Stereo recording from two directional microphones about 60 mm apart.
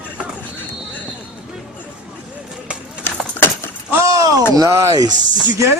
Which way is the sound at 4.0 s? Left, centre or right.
Right.